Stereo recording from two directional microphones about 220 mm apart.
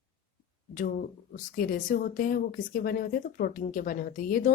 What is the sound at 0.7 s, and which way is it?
Speech, 35° left (ahead or behind).